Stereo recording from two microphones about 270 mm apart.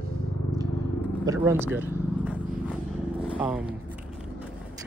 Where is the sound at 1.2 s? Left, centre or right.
Centre.